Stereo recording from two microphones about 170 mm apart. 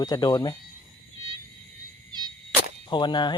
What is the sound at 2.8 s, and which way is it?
Speech, 25° left (ahead or behind).